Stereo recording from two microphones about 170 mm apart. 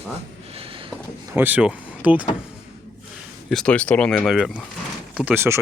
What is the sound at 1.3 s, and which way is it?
Speech, 10° right (ahead or behind).